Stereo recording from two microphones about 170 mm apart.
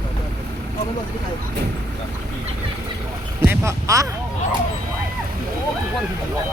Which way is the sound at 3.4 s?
15° right (ahead or behind).